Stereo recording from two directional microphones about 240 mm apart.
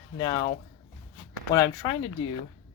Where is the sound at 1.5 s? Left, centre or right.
Centre.